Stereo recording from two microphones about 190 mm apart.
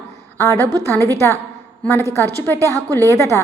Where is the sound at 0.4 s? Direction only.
10° left (ahead or behind).